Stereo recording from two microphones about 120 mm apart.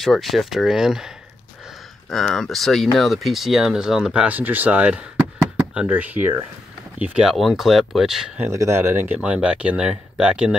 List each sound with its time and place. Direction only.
0.0 s speech: centre (ahead or behind)
8.5 s speech: 25° right (ahead or behind); by 10.5 s 5° right (ahead or behind)